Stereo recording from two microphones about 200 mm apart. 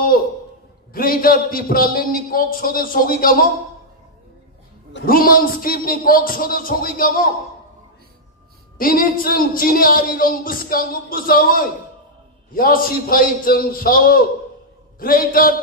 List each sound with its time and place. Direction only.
0.9 s speech: 45° left (ahead or behind)
4.9 s speech: 45° left (ahead or behind)
8.7 s speech: 45° left (ahead or behind)